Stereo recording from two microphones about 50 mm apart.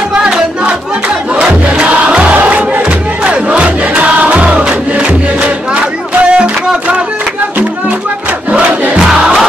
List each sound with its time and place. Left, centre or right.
0.1 s music: right
1.3 s crowd: centre
6.2 s music: right
8.5 s crowd: right
8.9 s crowd: centre